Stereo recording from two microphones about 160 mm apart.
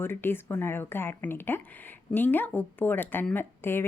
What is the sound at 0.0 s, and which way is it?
Speech, 15° left (ahead or behind).